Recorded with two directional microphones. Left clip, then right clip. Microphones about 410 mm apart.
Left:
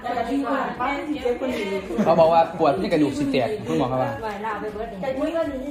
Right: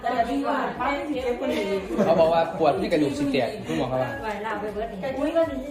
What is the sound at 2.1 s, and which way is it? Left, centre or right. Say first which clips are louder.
A man's voice: left 4 dB; centre.